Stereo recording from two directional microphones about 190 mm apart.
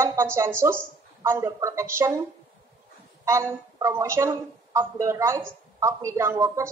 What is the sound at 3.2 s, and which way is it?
A woman's voice, 15° right (ahead or behind).